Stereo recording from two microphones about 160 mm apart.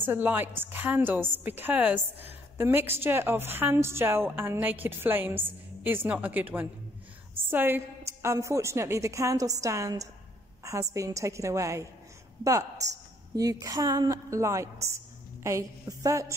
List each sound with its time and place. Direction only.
0.0 s a woman's voice: 10° right (ahead or behind)